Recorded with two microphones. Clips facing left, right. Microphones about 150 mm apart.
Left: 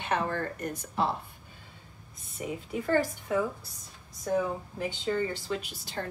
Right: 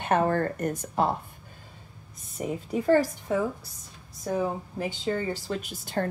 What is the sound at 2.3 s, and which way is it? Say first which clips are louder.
Speech: right 5 dB; 40° right (ahead or behind).